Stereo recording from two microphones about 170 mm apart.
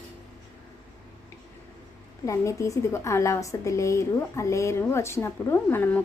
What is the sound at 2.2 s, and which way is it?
A woman's voice, 20° left (ahead or behind).